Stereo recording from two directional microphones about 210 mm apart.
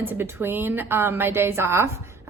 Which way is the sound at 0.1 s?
10° right (ahead or behind).